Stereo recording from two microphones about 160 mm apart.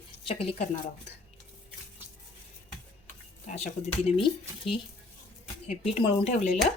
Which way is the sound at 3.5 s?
45° left (ahead or behind).